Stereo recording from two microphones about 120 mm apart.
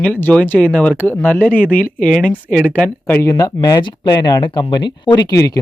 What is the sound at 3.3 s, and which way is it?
Speech, 30° left (ahead or behind).